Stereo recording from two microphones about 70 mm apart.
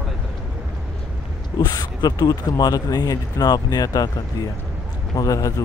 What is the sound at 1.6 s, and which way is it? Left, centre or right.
Speech, left.